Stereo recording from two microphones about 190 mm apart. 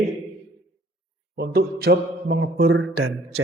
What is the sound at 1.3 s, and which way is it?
A man's voice, 55° right (ahead or behind).